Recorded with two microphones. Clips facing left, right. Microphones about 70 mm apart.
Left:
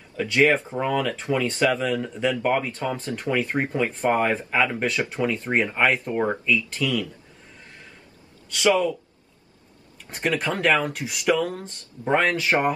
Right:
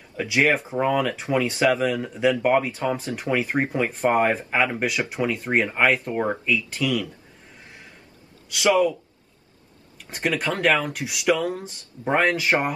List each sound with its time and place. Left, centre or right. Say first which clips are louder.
0.2 s speech: left 1 dB; centre
10.0 s speech: even; centre